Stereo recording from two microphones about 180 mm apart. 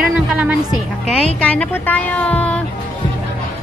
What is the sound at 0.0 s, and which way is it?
Music, 5° right (ahead or behind).